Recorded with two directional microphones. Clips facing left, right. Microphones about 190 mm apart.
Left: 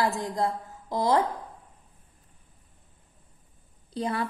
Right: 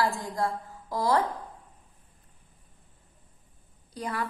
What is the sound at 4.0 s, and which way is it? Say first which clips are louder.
Speech: left 4 dB; 25° left (ahead or behind).